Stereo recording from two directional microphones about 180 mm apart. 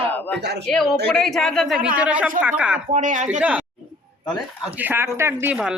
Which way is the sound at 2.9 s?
40° right (ahead or behind).